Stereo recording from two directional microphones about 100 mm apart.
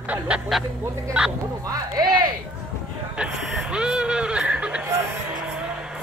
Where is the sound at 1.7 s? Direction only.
40° right (ahead or behind).